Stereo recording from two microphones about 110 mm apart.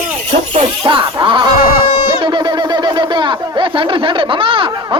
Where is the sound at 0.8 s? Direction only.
45° right (ahead or behind).